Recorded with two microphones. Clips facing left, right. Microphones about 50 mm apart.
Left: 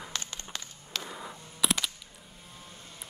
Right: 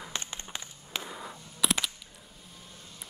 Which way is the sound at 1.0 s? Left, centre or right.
Centre.